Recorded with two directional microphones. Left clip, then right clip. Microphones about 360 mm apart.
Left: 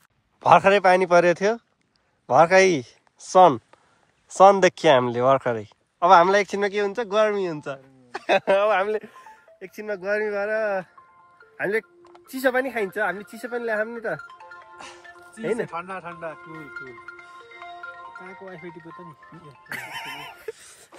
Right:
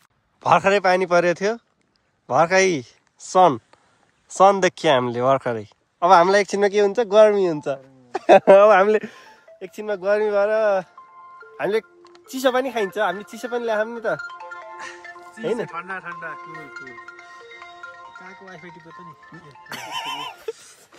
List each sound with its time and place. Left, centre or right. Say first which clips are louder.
0.4 s speech: left 1 dB; centre; by 9.2 s right
9.3 s speech: right 4 dB; centre
14.2 s music: right 8 dB; right
15.6 s speech: right 2 dB; centre
16.3 s music: right 2 dB; centre
19.2 s speech: right 1 dB; centre